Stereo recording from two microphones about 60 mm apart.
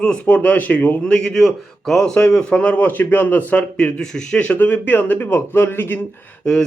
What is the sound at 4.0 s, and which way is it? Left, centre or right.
A man's voice, centre.